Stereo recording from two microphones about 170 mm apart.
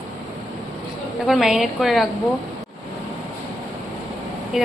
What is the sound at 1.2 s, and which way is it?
Speech, centre (ahead or behind).